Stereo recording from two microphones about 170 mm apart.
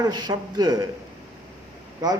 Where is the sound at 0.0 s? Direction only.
25° right (ahead or behind).